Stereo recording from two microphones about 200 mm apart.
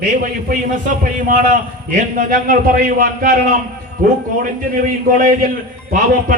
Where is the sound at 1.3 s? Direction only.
40° right (ahead or behind).